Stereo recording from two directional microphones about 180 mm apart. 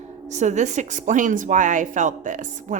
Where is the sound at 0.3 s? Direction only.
40° right (ahead or behind).